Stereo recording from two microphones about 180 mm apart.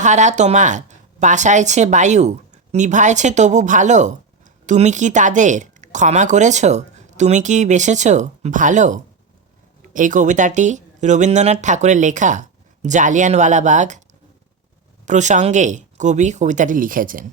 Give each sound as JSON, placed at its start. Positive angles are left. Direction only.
{"t": 0.0, "sound": "a woman's voice", "side_deg": -40}
{"t": 15.0, "sound": "a woman's voice", "side_deg": -40}